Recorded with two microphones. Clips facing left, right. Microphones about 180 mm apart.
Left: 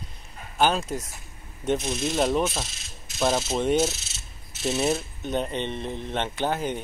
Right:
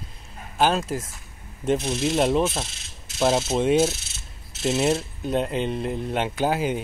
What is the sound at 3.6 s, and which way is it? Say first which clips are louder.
Speech: right 3 dB; centre (ahead or behind).